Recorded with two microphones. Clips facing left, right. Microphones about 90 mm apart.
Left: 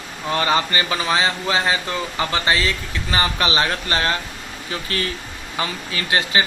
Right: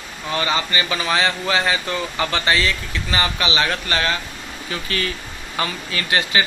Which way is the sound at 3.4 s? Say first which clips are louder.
Left 1 dB; 40° left (ahead or behind).